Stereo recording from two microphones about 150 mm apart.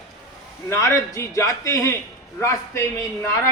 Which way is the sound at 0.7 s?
20° left (ahead or behind).